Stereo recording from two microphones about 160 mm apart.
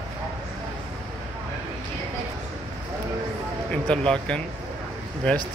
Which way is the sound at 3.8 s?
5° left (ahead or behind).